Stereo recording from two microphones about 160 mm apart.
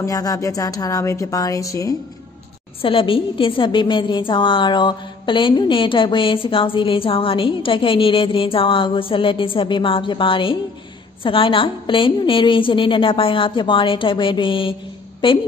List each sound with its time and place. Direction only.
0.0 s speech: 20° left (ahead or behind)
2.8 s a woman's voice: 35° left (ahead or behind)